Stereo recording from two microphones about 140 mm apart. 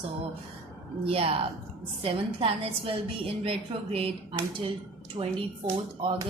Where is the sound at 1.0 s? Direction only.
45° right (ahead or behind).